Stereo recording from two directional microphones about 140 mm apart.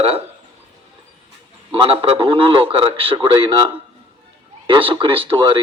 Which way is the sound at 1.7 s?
40° right (ahead or behind).